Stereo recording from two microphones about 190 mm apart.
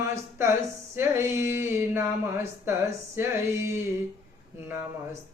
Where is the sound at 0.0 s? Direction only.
15° right (ahead or behind).